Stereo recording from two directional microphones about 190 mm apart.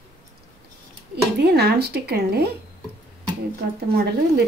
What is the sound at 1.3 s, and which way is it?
Speech, 60° right (ahead or behind).